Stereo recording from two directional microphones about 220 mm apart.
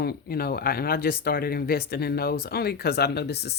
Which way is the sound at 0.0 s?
45° left (ahead or behind).